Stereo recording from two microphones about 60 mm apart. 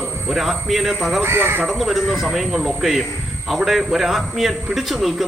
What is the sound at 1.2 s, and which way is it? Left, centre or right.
Speech, right.